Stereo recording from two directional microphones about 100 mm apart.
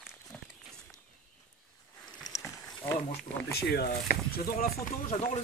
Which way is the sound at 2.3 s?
40° left (ahead or behind).